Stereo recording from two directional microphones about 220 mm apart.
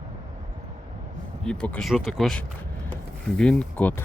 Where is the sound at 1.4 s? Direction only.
5° left (ahead or behind).